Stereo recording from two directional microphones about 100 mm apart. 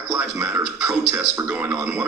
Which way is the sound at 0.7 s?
25° right (ahead or behind).